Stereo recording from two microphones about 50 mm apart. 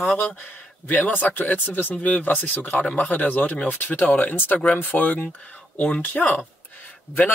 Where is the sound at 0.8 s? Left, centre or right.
Left.